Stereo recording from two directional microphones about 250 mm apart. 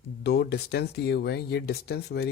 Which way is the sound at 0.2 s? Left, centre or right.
Left.